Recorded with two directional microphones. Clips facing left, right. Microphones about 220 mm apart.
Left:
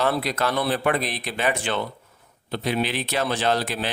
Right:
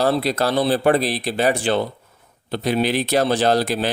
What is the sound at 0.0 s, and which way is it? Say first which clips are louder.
Speech: right 5 dB; 30° right (ahead or behind).